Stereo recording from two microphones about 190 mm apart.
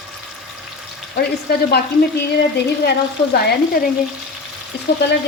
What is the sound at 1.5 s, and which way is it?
Speech, 55° left (ahead or behind).